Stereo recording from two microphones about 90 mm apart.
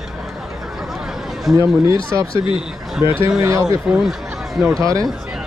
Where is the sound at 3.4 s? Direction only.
35° right (ahead or behind).